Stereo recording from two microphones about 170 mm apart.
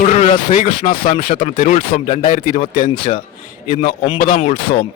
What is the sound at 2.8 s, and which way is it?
A man's voice, 30° left (ahead or behind).